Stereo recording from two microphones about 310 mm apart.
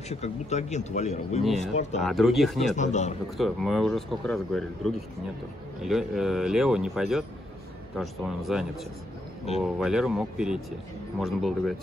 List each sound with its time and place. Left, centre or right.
0.1 s speech: left
2.0 s speech: centre
2.7 s speech: left
3.3 s speech: centre